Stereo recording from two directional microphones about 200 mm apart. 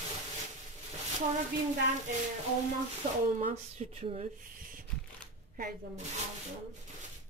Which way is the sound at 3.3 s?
35° right (ahead or behind).